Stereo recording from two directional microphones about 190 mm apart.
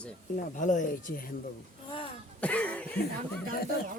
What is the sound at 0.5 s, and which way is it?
Speech, 40° left (ahead or behind).